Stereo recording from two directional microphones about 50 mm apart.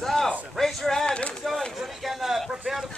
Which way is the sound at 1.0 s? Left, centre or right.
Left.